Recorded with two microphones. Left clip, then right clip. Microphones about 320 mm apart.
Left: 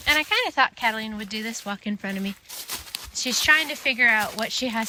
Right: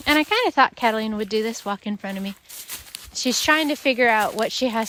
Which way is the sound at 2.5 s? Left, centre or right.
Centre.